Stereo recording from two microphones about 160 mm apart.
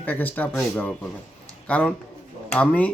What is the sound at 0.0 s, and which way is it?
Speech, 10° left (ahead or behind).